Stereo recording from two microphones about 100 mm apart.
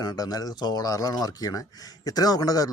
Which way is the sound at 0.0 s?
40° left (ahead or behind).